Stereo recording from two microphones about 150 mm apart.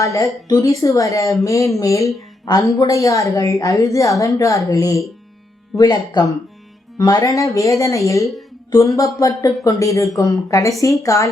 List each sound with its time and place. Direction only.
0.0 s a woman's voice: 20° left (ahead or behind)